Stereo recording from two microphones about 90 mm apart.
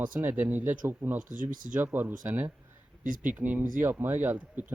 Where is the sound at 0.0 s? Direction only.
20° right (ahead or behind).